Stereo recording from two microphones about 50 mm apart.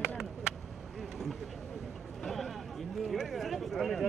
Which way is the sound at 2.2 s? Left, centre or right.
Centre.